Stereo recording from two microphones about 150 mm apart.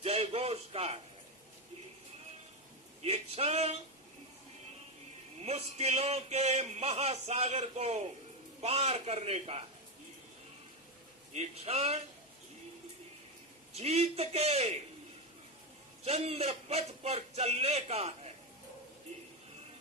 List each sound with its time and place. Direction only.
0.0 s speech: 40° right (ahead or behind)
3.0 s speech: 45° right (ahead or behind)
5.4 s speech: 45° right (ahead or behind)
11.3 s speech: 45° right (ahead or behind)
13.7 s speech: 45° right (ahead or behind)
16.0 s speech: 45° right (ahead or behind)